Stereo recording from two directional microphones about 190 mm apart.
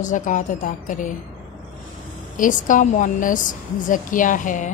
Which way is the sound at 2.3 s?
45° left (ahead or behind).